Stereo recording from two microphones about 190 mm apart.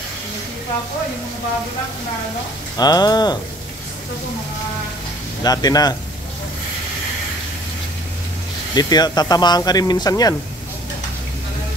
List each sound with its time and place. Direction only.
2.8 s speech: 20° left (ahead or behind)
5.4 s speech: 20° left (ahead or behind)
8.7 s speech: 20° left (ahead or behind)